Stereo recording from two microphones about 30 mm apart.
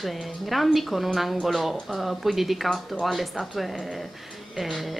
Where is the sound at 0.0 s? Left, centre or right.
Centre.